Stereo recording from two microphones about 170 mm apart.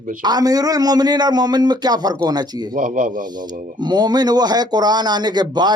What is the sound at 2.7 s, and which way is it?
Speech, 50° right (ahead or behind).